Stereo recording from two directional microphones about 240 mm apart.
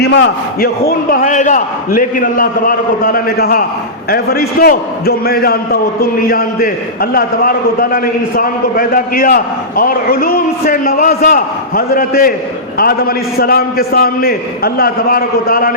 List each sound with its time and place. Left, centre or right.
0.0 s a man's voice: left